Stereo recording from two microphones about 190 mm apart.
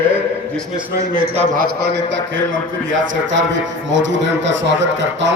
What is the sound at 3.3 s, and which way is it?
Speech, 75° right (ahead or behind).